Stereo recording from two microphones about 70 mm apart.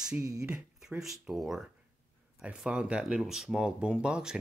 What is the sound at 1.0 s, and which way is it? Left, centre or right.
Speech, centre.